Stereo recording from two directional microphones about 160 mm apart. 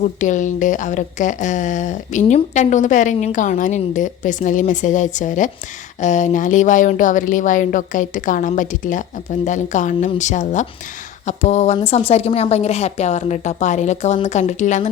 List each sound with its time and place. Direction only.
0.0 s a woman's voice: 50° left (ahead or behind)